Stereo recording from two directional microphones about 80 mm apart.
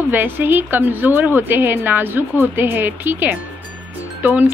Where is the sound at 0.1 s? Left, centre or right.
Right.